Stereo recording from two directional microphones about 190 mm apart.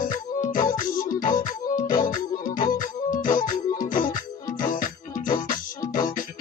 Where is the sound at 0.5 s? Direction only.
45° left (ahead or behind).